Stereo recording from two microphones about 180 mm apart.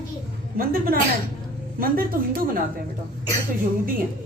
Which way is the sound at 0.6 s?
55° right (ahead or behind).